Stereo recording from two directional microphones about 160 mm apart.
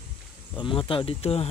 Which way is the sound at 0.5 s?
30° left (ahead or behind).